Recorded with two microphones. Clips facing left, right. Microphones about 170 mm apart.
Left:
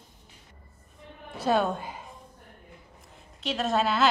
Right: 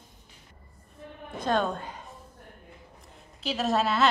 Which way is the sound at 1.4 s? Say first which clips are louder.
Left 2 dB; 10° left (ahead or behind).